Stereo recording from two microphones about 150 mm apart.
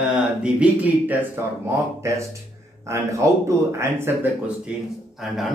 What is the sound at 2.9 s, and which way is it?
A man's voice, 20° right (ahead or behind).